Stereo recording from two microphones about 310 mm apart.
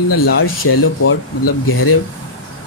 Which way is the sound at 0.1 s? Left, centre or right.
Left.